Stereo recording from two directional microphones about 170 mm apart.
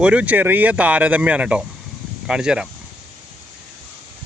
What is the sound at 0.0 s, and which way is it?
Speech, 5° right (ahead or behind).